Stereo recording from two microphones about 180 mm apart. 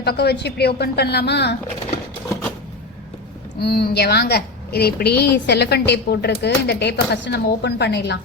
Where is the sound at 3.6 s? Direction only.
60° left (ahead or behind).